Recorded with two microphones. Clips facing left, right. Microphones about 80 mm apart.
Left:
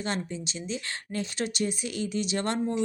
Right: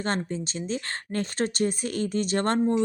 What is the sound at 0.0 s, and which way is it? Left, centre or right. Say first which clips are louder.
A woman's voice: right 4 dB; right.